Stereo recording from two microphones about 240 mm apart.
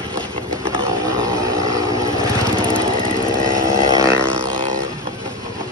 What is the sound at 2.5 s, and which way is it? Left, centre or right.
Vehicle, centre.